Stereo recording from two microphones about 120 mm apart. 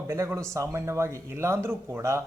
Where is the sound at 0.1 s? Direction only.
25° right (ahead or behind).